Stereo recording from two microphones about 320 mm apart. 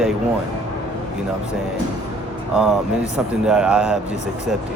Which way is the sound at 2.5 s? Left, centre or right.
Centre.